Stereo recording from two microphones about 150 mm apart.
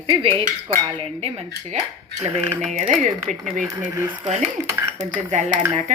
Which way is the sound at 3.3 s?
55° right (ahead or behind).